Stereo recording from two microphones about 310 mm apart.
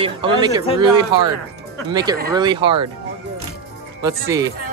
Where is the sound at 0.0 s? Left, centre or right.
Centre.